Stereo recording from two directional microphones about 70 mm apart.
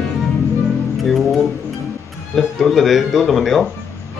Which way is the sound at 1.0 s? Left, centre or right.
Centre.